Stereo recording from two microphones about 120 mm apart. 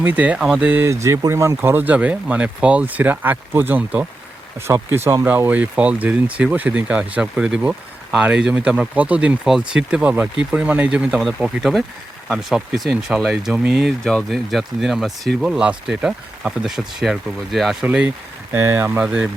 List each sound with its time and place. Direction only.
0.0 s speech: 15° right (ahead or behind)
18.5 s speech: 20° right (ahead or behind)
19.0 s speech: 5° right (ahead or behind)